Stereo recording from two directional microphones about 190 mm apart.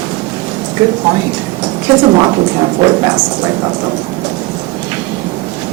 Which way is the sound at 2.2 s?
25° right (ahead or behind).